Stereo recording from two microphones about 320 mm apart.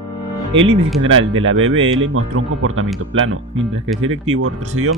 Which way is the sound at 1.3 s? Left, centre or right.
Right.